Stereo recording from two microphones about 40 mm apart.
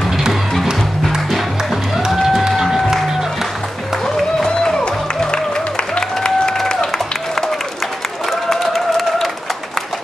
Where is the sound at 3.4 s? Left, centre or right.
Centre.